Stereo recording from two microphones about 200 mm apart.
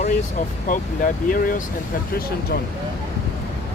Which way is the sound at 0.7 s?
45° left (ahead or behind).